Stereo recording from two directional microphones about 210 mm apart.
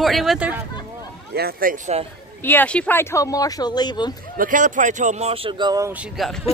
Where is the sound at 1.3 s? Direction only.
45° right (ahead or behind).